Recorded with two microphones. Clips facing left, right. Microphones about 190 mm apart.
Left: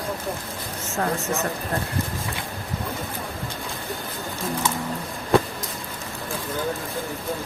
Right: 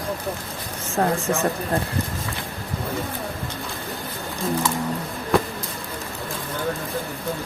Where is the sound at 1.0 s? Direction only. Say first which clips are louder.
Right 4 dB; 35° right (ahead or behind).